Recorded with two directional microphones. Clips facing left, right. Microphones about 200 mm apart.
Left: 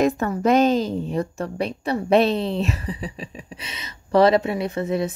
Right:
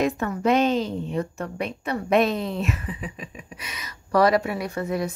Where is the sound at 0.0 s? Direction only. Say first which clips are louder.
Left 3 dB; 40° left (ahead or behind).